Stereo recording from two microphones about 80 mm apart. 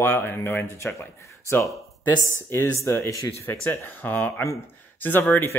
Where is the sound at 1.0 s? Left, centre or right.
Left.